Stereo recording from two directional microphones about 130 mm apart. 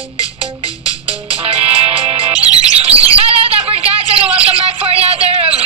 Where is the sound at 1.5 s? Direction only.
50° right (ahead or behind).